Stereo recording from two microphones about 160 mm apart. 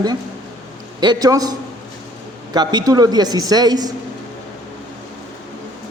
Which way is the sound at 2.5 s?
25° right (ahead or behind).